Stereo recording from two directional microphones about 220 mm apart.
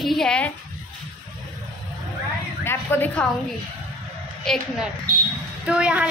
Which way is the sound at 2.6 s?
10° left (ahead or behind).